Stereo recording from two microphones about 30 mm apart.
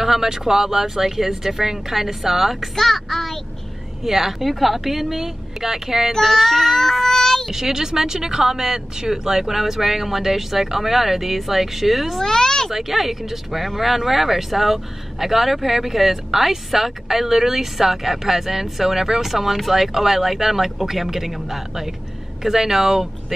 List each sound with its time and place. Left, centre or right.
0.0 s speech: centre
2.7 s a child's voice: centre
4.0 s speech: centre
6.2 s child singing: centre
7.5 s speech: centre
12.2 s speech: centre
12.7 s speech: centre